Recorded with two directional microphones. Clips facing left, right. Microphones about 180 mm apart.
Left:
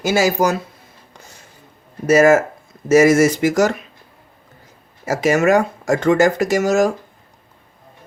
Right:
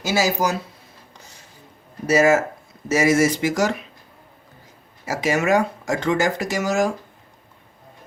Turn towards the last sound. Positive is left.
turn(degrees=45)  # may be behind; listen again after turning